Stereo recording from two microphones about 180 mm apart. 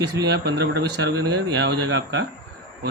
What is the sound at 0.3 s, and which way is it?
Speech, 65° right (ahead or behind).